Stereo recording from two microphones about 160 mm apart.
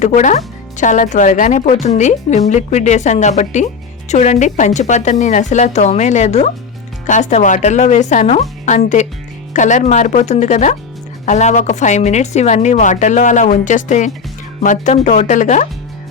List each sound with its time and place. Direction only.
0.0 s speech: 50° left (ahead or behind)